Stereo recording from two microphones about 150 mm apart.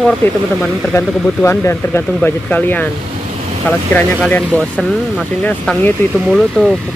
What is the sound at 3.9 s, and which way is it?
Speech, 10° left (ahead or behind).